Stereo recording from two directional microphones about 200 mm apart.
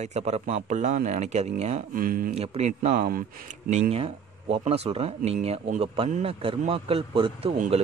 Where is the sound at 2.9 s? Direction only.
45° right (ahead or behind).